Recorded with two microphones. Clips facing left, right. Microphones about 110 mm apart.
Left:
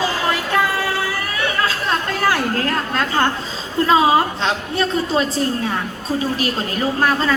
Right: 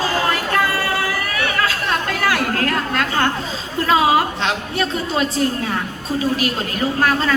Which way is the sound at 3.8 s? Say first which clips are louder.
Left 1 dB; 30° left (ahead or behind).